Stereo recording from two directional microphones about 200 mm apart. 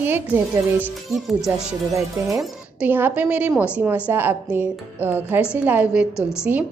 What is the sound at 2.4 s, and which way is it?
A woman's voice, 10° right (ahead or behind).